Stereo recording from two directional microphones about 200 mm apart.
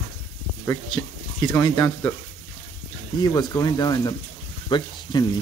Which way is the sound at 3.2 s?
20° left (ahead or behind).